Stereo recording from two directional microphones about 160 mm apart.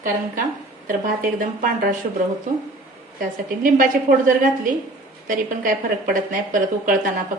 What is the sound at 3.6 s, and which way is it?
Speech, 55° right (ahead or behind).